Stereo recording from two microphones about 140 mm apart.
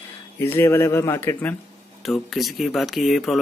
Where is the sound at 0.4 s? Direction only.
15° left (ahead or behind).